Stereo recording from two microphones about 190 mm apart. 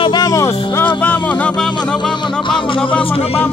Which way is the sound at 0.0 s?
20° left (ahead or behind).